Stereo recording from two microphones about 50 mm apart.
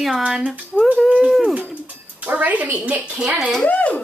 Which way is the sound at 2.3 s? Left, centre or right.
Right.